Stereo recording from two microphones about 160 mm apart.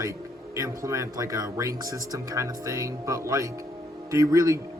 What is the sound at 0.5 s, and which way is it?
A man's voice, 20° right (ahead or behind).